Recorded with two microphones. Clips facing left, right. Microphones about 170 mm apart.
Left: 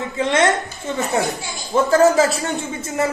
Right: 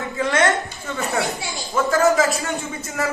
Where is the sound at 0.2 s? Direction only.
25° left (ahead or behind).